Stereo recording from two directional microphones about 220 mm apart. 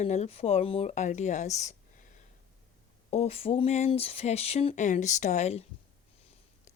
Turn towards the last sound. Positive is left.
turn(degrees=30)  # may be behind; listen again after turning